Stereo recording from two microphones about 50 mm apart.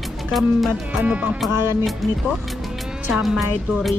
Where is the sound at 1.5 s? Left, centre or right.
Right.